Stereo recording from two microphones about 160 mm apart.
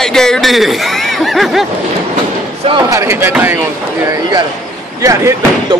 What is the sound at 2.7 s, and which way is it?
Speech, 25° right (ahead or behind).